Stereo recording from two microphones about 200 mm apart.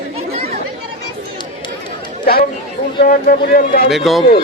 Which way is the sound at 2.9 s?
45° left (ahead or behind).